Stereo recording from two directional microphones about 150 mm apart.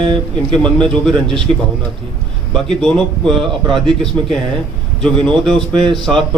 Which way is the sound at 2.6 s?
5° left (ahead or behind).